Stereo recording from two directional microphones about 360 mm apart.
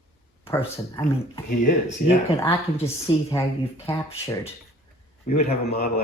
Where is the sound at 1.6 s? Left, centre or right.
Left.